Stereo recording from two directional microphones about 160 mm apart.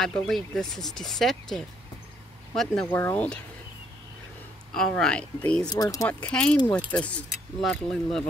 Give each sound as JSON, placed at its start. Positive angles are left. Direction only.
{"t": 0.0, "sound": "speech", "side_deg": 5}
{"t": 4.7, "sound": "speech", "side_deg": 5}
{"t": 5.7, "sound": "speech", "side_deg": 20}
{"t": 6.0, "sound": "speech", "side_deg": 5}